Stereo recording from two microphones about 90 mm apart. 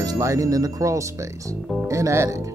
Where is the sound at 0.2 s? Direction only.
35° right (ahead or behind).